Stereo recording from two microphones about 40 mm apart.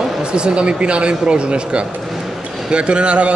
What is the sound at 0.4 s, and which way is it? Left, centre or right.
A man's voice, right.